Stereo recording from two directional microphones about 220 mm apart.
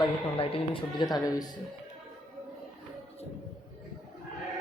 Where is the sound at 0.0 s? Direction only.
25° left (ahead or behind).